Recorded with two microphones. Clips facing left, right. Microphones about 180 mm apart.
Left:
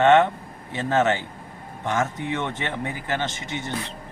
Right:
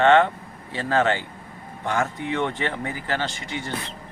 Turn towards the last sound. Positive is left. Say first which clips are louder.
# even
turn(degrees=20)  # may be behind; listen again after turning